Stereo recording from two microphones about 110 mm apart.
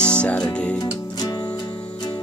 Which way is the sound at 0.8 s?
35° left (ahead or behind).